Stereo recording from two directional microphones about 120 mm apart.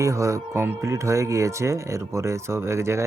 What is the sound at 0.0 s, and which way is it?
Speech, 25° right (ahead or behind).